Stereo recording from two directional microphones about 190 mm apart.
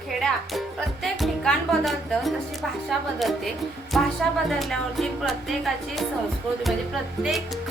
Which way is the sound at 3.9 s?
Centre (ahead or behind).